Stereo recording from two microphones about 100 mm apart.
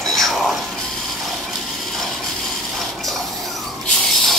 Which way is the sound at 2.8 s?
Centre (ahead or behind).